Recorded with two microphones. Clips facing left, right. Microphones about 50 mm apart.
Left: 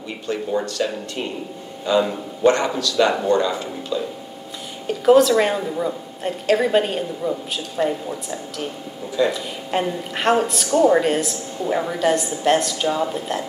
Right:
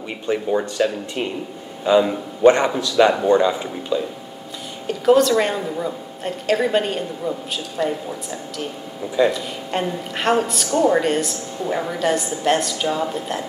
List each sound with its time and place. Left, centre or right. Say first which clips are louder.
0.3 s speech: right 2 dB; centre
1.9 s a man's voice: right 3 dB; centre
4.8 s a woman's voice: left 1 dB; centre